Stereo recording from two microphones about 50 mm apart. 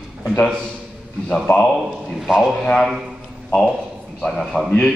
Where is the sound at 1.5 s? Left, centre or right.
Left.